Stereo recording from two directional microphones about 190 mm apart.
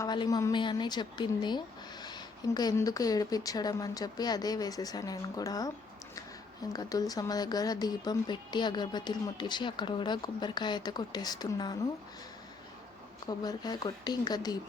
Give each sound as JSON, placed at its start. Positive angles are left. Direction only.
{"t": 0.0, "sound": "a woman's voice", "side_deg": 20}
{"t": 6.7, "sound": "a woman's voice", "side_deg": 20}
{"t": 13.4, "sound": "a woman's voice", "side_deg": 20}